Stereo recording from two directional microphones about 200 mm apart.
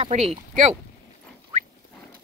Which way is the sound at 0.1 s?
40° right (ahead or behind).